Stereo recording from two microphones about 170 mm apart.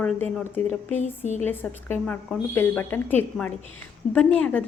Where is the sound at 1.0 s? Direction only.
45° left (ahead or behind).